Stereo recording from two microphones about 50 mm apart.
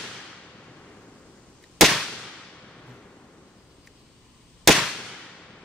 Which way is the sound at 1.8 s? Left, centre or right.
Centre.